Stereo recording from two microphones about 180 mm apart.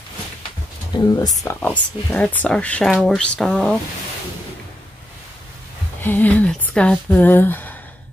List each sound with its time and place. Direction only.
0.9 s speech: 25° left (ahead or behind)
1.4 s speech: 10° left (ahead or behind)
6.0 s speech: 10° left (ahead or behind)